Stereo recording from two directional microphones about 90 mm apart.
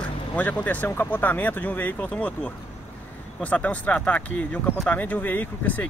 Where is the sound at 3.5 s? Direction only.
15° left (ahead or behind).